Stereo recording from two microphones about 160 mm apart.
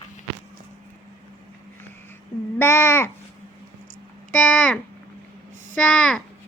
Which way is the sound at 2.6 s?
15° left (ahead or behind).